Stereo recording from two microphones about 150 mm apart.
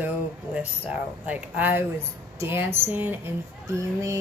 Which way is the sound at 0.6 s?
10° right (ahead or behind).